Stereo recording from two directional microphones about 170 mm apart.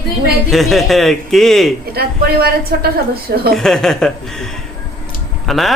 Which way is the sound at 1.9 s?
65° right (ahead or behind).